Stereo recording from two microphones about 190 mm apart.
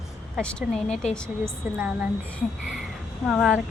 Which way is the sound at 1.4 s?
5° right (ahead or behind).